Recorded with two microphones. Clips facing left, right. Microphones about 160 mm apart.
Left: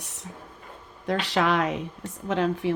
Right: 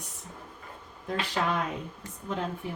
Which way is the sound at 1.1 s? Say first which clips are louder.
Left 6 dB; 90° left.